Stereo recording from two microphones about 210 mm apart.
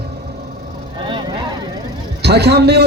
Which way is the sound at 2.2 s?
50° right (ahead or behind).